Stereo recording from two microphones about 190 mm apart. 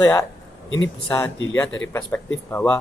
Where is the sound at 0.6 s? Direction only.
80° left.